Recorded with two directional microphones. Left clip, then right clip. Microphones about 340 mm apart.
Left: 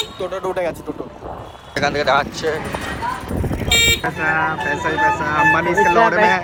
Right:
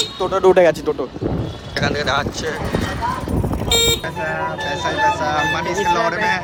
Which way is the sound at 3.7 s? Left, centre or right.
Centre.